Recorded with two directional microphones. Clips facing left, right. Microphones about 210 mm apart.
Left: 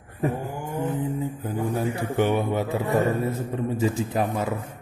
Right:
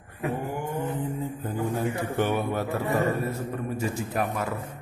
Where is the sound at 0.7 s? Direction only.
10° left (ahead or behind).